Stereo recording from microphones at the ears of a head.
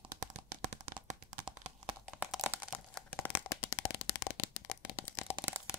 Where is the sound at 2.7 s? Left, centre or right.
Left.